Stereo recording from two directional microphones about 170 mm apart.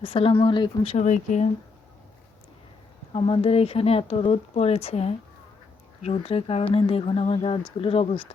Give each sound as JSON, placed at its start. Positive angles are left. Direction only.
{"t": 0.0, "sound": "speech", "side_deg": 35}
{"t": 0.9, "sound": "speech", "side_deg": 45}
{"t": 3.1, "sound": "speech", "side_deg": 35}